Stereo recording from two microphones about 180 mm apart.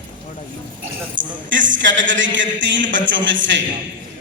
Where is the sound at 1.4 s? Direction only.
90° right.